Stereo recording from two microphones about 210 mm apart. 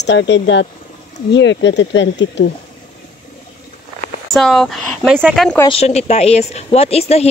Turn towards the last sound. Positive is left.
turn(degrees=30)  # may be behind; listen again after turning